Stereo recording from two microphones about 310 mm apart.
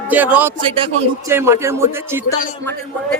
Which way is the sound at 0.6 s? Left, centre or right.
Centre.